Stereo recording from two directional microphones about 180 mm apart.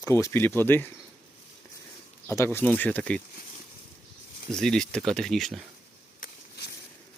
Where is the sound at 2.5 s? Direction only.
10° left (ahead or behind).